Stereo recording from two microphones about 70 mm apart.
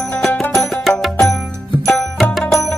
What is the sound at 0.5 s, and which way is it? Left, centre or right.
Music, centre.